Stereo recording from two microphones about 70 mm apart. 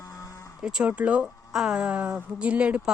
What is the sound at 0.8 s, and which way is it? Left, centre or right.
A woman's voice, centre.